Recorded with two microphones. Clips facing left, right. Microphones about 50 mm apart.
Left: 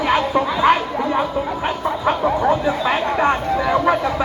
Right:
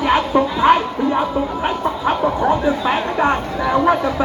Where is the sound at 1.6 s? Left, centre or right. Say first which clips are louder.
Left 1 dB; centre.